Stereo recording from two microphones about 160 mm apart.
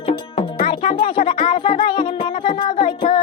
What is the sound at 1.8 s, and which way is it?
Music, 30° left (ahead or behind).